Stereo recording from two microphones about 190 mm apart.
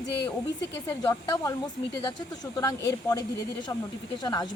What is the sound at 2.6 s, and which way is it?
Speech, 20° left (ahead or behind).